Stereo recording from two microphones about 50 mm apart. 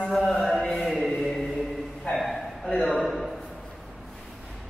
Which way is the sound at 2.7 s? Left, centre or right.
Centre.